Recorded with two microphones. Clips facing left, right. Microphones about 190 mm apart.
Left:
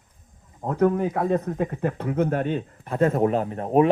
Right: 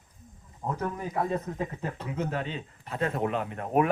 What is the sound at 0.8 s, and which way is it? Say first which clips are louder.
Speech: left 11 dB; 60° left (ahead or behind).